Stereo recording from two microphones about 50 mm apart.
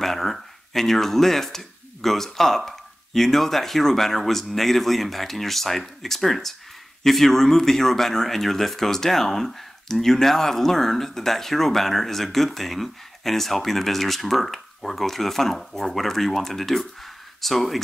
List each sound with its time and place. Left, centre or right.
0.0 s speech: centre